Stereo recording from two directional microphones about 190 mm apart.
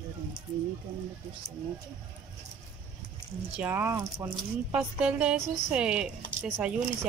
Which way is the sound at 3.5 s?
10° right (ahead or behind).